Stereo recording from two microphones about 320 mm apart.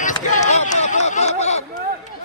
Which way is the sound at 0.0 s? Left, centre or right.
Left.